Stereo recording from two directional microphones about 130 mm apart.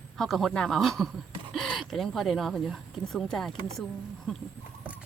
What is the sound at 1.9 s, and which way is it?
Speech, centre (ahead or behind).